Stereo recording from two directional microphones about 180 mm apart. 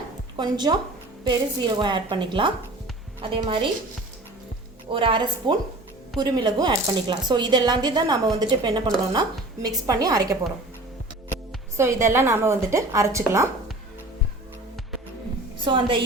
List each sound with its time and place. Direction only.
0.3 s speech: 25° right (ahead or behind)
4.9 s speech: 30° right (ahead or behind)
11.8 s a woman's voice: 15° right (ahead or behind)
15.5 s a woman's voice: 25° right (ahead or behind)